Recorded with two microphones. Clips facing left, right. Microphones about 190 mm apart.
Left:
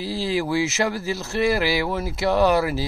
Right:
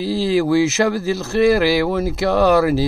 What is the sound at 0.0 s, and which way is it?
A man's voice, 40° right (ahead or behind).